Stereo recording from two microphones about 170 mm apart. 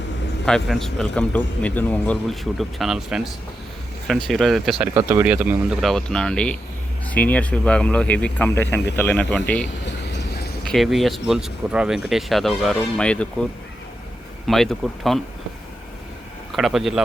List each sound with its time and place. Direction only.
0.4 s a man's voice: 5° left (ahead or behind)
4.3 s a man's voice: centre (ahead or behind)
4.8 s speech: 15° right (ahead or behind)
5.9 s a man's voice: 5° left (ahead or behind)
9.8 s a sound: 90° left
10.6 s a man's voice: centre (ahead or behind)
14.4 s a man's voice: centre (ahead or behind)
16.5 s speech: centre (ahead or behind)